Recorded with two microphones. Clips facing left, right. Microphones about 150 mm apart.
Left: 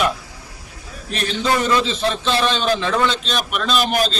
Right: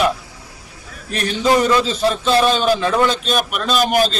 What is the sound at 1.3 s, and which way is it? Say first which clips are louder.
Speech: right 4 dB; 10° right (ahead or behind).